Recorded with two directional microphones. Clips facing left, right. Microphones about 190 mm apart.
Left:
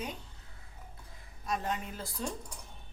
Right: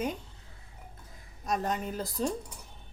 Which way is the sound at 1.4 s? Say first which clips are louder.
Right 4 dB; 40° right (ahead or behind).